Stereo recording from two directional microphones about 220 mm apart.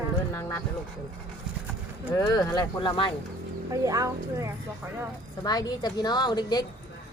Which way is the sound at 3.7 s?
15° right (ahead or behind).